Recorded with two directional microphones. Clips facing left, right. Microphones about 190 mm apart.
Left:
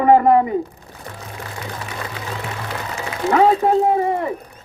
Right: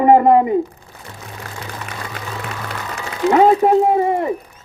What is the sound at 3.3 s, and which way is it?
Speech, 20° right (ahead or behind).